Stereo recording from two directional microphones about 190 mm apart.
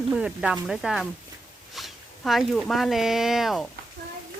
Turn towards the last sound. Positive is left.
turn(degrees=0)  # may be behind; listen again after turning